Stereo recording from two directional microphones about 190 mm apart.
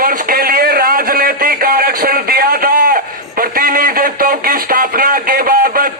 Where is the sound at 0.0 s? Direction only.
50° right (ahead or behind).